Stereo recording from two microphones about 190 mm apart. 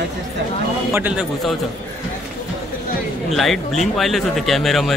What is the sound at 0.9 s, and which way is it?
Speech, 10° right (ahead or behind).